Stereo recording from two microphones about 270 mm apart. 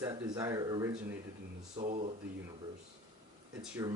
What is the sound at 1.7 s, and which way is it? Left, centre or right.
Speech, right.